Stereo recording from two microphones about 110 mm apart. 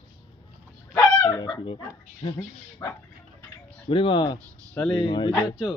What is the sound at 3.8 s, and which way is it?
Speech, 50° left (ahead or behind).